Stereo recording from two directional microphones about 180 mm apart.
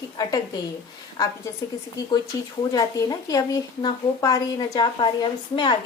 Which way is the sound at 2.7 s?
20° left (ahead or behind).